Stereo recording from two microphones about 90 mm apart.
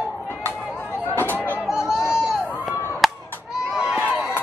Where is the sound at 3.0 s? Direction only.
5° right (ahead or behind).